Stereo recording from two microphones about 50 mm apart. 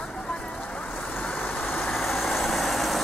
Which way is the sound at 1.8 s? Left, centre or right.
Centre.